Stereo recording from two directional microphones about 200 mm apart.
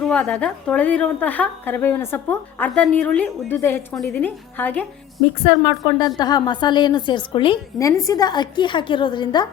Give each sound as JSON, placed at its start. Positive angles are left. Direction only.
{"t": 0.0, "sound": "a woman's voice", "side_deg": 5}
{"t": 5.5, "sound": "a woman's voice", "side_deg": 20}